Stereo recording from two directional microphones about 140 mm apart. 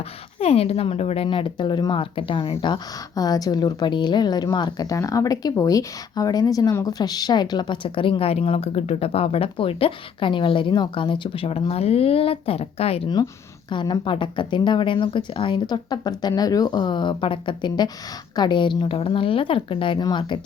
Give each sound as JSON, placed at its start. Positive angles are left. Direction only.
{"t": 0.3, "sound": "speech", "side_deg": 45}
{"t": 13.7, "sound": "speech", "side_deg": 30}